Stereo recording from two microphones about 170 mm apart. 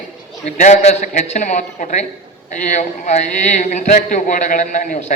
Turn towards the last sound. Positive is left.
turn(degrees=50)  # may be behind; listen again after turning